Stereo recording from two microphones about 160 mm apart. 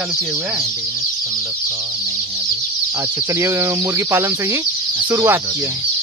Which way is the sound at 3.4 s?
15° right (ahead or behind).